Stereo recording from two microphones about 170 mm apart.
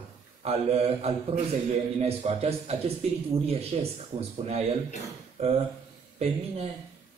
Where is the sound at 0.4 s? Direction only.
35° right (ahead or behind).